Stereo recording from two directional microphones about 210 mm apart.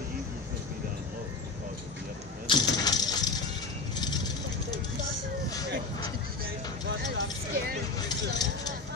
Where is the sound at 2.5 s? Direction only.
25° left (ahead or behind).